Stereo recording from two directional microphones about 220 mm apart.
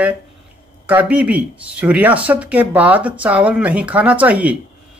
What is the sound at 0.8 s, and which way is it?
Speech, 5° right (ahead or behind).